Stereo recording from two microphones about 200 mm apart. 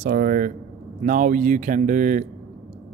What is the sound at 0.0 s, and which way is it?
Speech, 45° right (ahead or behind).